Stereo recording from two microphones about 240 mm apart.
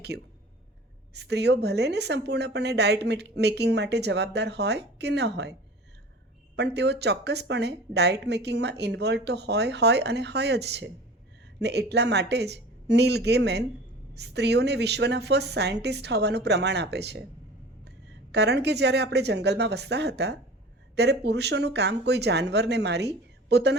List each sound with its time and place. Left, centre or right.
1.1 s a woman's voice: right
6.6 s a woman's voice: right
18.3 s a woman's voice: right